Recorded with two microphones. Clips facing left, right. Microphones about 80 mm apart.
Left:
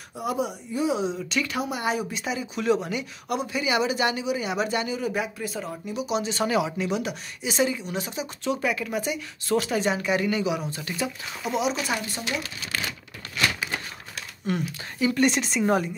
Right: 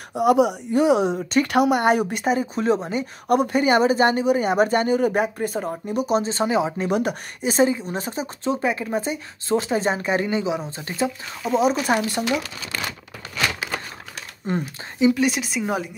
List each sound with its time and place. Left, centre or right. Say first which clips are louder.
0.1 s speech: right 11 dB; right
3.3 s speech: right 9 dB; right
6.8 s speech: right 5 dB; right
11.6 s speech: right 8 dB; right
14.4 s speech: right 2 dB; right
15.1 s speech: even; centre